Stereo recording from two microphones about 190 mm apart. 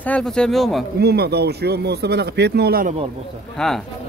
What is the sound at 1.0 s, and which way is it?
Speech, 55° right (ahead or behind).